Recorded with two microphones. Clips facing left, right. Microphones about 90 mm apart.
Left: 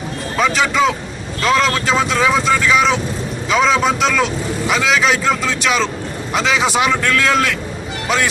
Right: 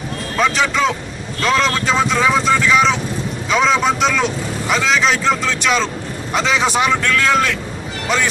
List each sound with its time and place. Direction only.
0.3 s speech: centre (ahead or behind)